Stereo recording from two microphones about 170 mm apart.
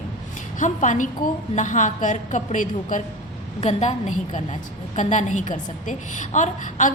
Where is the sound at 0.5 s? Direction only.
45° left (ahead or behind).